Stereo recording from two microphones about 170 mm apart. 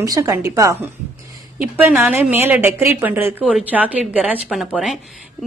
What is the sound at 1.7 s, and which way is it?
A woman's voice, 10° right (ahead or behind).